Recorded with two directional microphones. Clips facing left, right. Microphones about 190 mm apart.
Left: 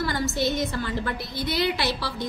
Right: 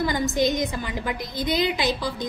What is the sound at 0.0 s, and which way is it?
A woman's voice, 15° right (ahead or behind).